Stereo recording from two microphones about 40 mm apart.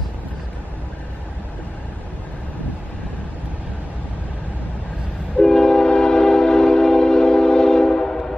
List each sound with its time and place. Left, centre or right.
5.4 s train: centre